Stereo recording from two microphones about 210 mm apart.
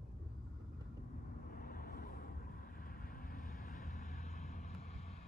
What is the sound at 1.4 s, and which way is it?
Vehicle, 45° left (ahead or behind).